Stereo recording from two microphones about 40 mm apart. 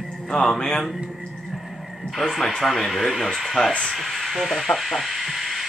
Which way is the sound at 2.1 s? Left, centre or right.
Centre.